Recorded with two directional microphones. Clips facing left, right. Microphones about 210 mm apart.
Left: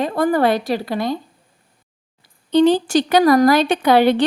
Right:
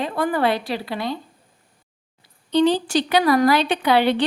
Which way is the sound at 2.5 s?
50° left (ahead or behind).